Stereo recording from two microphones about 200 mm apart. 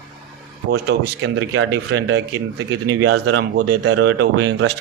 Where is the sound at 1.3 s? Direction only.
90° right.